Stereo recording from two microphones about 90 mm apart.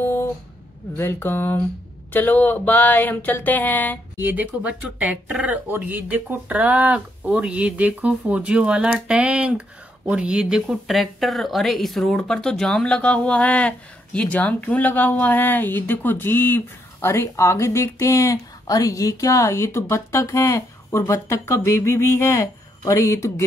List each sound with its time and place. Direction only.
0.0 s a sound: 25° left (ahead or behind)
0.9 s speech: 25° left (ahead or behind)
4.2 s speech: 20° right (ahead or behind); by 23.4 s 35° left (ahead or behind)